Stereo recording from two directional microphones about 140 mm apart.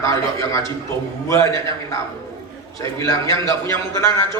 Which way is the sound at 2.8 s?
25° left (ahead or behind).